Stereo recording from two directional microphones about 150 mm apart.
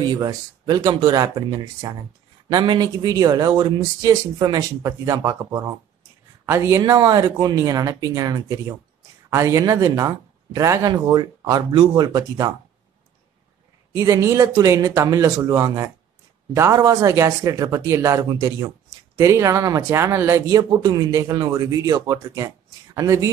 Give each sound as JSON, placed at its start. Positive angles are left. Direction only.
{"t": 0.0, "sound": "speech", "side_deg": -25}
{"t": 13.9, "sound": "speech", "side_deg": -20}